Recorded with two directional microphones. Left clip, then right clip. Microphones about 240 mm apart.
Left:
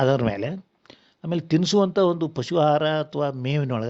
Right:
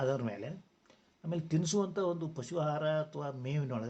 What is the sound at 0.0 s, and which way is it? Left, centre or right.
Speech, left.